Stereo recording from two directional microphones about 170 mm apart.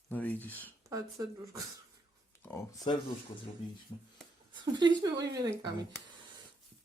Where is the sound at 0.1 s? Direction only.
10° left (ahead or behind).